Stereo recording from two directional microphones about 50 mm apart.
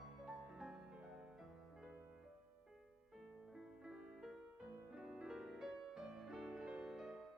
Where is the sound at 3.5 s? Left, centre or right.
Centre.